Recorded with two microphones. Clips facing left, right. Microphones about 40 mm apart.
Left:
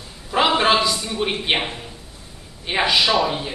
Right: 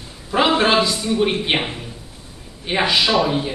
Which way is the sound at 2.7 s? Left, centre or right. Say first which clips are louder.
Right 1 dB; centre.